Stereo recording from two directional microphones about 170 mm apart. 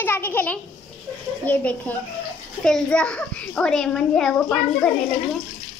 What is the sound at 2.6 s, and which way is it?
A child's voice, 5° left (ahead or behind).